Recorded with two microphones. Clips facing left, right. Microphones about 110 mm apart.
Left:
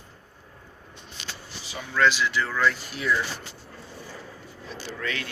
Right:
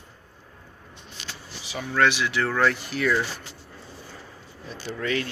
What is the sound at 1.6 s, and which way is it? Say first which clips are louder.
Speech: right 1 dB; 65° right (ahead or behind).